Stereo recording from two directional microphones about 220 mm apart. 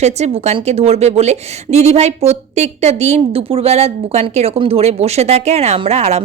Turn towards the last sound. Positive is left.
turn(degrees=-30)  # may be behind; listen again after turning